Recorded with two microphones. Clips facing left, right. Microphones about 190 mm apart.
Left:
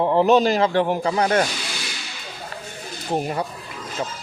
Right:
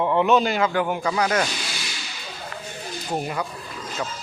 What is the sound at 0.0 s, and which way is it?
Speech, 35° left (ahead or behind).